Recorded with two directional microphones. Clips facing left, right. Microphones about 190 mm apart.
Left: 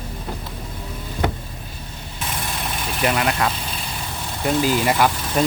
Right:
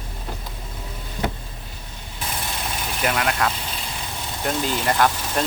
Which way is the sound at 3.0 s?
Centre (ahead or behind).